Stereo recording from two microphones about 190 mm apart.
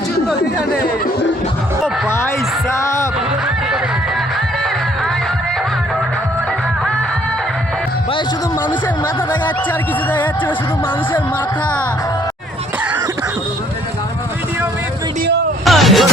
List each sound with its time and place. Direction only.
2.0 s a sound: 15° left (ahead or behind)
2.7 s music: 15° left (ahead or behind)
10.1 s speech: 10° left (ahead or behind)
15.6 s music: centre (ahead or behind)